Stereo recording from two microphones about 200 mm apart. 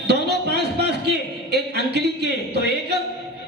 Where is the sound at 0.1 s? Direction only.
55° right (ahead or behind).